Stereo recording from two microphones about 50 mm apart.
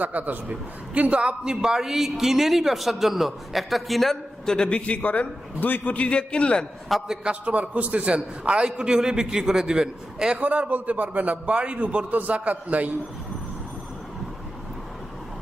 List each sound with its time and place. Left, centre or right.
0.0 s a man's voice: right; by 4.8 s centre
4.9 s a man's voice: left
6.9 s a man's voice: centre
7.4 s a man's voice: right
10.4 s a man's voice: right